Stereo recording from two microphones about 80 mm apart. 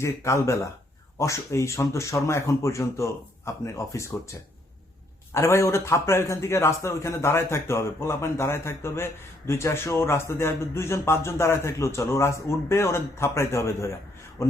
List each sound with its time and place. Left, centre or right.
0.0 s a man's voice: left
5.3 s a man's voice: left